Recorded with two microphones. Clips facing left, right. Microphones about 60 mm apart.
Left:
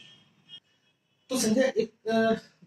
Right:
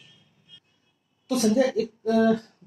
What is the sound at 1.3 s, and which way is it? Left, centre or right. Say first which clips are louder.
A woman's voice: right 3 dB; right.